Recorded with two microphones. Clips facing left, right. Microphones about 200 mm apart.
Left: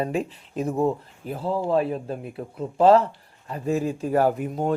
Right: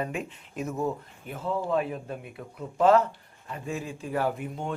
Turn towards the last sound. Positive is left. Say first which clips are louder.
# left 7 dB
turn(degrees=40)  # may be behind; listen again after turning